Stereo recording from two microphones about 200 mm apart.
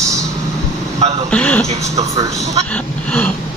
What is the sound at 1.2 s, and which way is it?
Speech, 5° left (ahead or behind).